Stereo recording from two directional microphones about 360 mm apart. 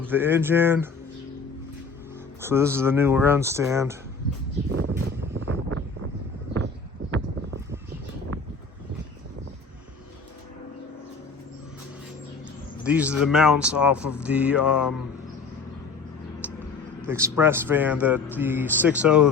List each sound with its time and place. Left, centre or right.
0.0 s speech: centre
2.4 s speech: centre
4.9 s vehicle: right
12.8 s a man's voice: centre
16.4 s a sound: centre
17.1 s speech: centre